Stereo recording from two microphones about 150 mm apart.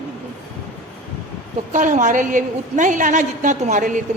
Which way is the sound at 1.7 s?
55° right (ahead or behind).